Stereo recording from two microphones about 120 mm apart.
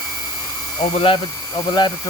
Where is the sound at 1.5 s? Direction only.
35° left (ahead or behind).